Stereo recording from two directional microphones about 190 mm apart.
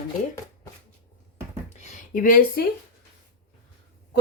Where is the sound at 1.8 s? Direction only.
40° left (ahead or behind).